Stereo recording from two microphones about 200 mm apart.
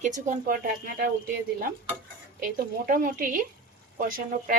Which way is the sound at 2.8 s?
45° right (ahead or behind).